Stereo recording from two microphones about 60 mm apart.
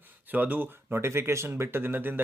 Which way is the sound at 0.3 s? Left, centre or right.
Right.